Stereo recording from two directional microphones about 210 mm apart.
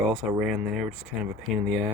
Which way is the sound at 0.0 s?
Centre (ahead or behind).